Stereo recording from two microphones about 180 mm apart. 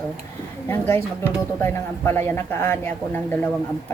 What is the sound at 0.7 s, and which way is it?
Speech, 10° left (ahead or behind).